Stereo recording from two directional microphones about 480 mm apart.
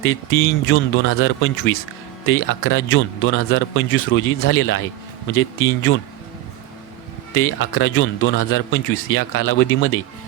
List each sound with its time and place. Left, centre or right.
0.0 s a man's voice: left
7.3 s a man's voice: left